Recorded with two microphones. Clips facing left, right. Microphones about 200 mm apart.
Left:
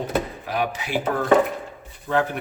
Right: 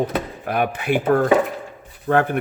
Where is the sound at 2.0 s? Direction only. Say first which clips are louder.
Right 4 dB; 55° right (ahead or behind).